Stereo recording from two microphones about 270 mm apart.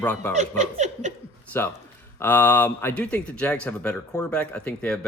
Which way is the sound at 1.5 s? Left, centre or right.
Centre.